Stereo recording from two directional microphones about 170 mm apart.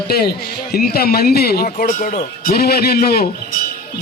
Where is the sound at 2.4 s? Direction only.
65° left (ahead or behind).